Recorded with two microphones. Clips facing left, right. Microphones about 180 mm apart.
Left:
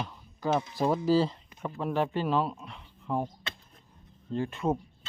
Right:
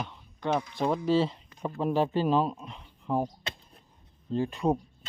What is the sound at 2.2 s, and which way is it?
Speech, 15° right (ahead or behind).